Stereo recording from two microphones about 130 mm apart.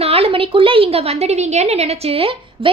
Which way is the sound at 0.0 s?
50° right (ahead or behind).